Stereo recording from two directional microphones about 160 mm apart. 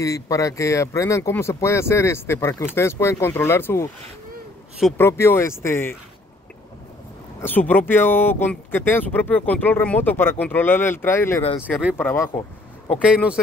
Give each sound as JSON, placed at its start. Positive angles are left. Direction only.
{"t": 0.0, "sound": "speech", "side_deg": 20}
{"t": 4.9, "sound": "speech", "side_deg": 15}
{"t": 7.4, "sound": "speech", "side_deg": 10}
{"t": 11.7, "sound": "speech", "side_deg": -5}
{"t": 12.0, "sound": "speech", "side_deg": 15}
{"t": 12.9, "sound": "speech", "side_deg": -5}